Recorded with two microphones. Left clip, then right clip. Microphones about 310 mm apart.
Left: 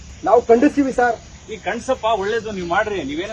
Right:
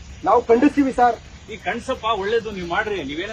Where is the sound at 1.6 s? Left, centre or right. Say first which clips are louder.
Left 3 dB; centre.